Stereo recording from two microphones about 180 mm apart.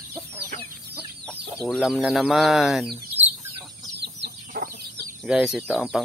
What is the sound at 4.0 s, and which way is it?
Chicken, 70° right (ahead or behind).